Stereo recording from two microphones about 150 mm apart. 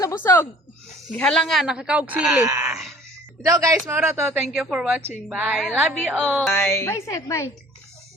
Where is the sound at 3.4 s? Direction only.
25° right (ahead or behind).